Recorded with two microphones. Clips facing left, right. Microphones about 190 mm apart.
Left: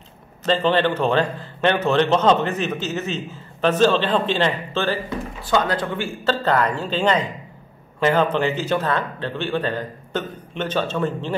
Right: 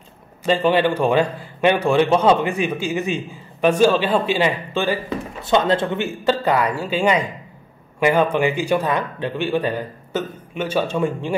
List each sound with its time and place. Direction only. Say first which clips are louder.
0.4 s a man's voice: right 2 dB; 10° right (ahead or behind)
5.4 s a man's voice: right 4 dB; 25° right (ahead or behind)